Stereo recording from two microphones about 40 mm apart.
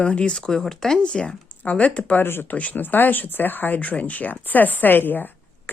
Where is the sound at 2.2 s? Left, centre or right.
Left.